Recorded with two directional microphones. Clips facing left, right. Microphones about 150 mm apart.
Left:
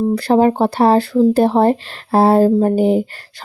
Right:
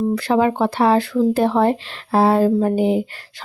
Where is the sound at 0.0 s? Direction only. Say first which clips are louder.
Left 4 dB; 35° left (ahead or behind).